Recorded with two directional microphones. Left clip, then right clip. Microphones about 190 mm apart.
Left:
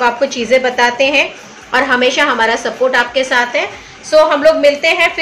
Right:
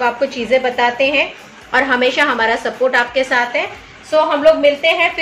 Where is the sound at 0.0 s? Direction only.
10° left (ahead or behind).